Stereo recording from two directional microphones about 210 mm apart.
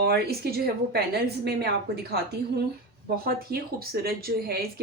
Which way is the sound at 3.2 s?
45° right (ahead or behind).